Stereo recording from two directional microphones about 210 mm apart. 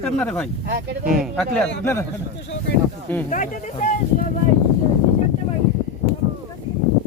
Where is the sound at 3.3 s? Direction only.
35° left (ahead or behind).